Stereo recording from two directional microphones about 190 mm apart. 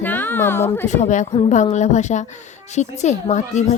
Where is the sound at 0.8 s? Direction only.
40° left (ahead or behind).